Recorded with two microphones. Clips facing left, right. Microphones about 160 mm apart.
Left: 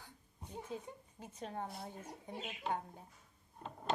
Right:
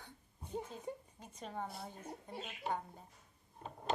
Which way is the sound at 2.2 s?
10° left (ahead or behind).